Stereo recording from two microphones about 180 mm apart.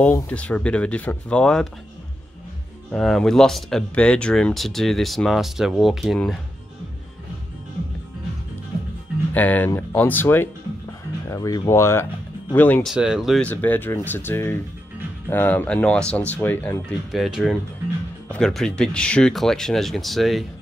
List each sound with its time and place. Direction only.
0.0 s speech: 5° left (ahead or behind)
2.9 s speech: centre (ahead or behind)
9.3 s speech: 10° left (ahead or behind)
12.9 s speech: 5° right (ahead or behind)
17.1 s speech: centre (ahead or behind)